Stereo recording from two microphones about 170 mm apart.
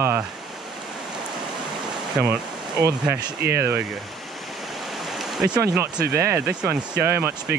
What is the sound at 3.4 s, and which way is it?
Speech, 70° right (ahead or behind).